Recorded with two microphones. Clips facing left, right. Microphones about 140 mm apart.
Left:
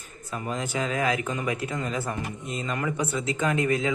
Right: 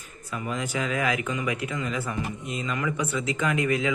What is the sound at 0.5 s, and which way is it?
Speech, 30° left (ahead or behind).